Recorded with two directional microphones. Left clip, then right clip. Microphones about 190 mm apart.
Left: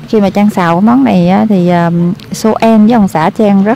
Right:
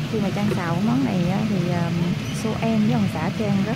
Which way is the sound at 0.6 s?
35° left (ahead or behind).